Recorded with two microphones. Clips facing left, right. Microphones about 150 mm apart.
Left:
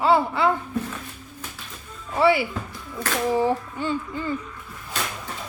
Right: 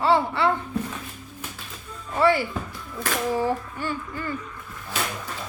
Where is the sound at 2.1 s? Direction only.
10° left (ahead or behind).